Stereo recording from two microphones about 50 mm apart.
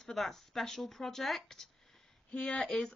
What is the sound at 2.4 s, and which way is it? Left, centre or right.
Speech, centre.